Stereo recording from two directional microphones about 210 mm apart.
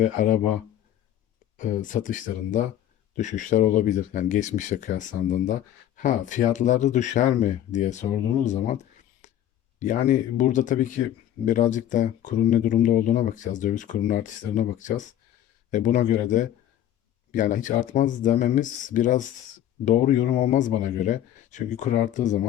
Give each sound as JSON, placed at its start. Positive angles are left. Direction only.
{"t": 0.0, "sound": "speech", "side_deg": 40}
{"t": 1.5, "sound": "speech", "side_deg": 40}
{"t": 9.2, "sound": "a sound", "side_deg": 35}
{"t": 9.8, "sound": "speech", "side_deg": 35}